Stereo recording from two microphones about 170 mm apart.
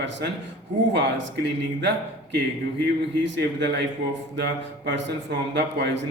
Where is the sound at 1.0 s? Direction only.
90° right.